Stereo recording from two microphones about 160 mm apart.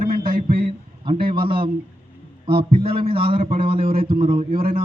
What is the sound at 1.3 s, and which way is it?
A man's voice, 30° right (ahead or behind).